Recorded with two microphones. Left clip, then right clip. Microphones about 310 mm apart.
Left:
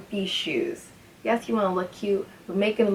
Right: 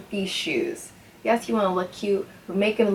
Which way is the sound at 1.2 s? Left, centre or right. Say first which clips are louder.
Right 2 dB; centre.